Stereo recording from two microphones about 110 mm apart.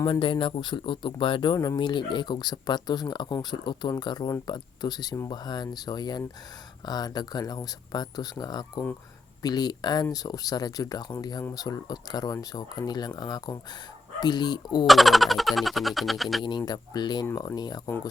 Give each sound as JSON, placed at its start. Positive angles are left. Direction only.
{"t": 0.1, "sound": "speech", "side_deg": 50}
{"t": 1.5, "sound": "speech", "side_deg": 30}
{"t": 1.8, "sound": "speech", "side_deg": 45}
{"t": 14.8, "sound": "speech", "side_deg": 0}
{"t": 16.4, "sound": "speech", "side_deg": 40}